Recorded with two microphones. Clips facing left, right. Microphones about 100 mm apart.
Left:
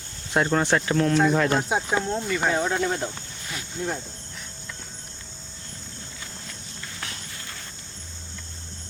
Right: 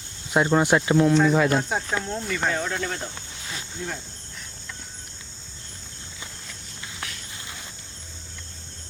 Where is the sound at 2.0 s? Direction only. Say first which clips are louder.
Left 3 dB; 15° left (ahead or behind).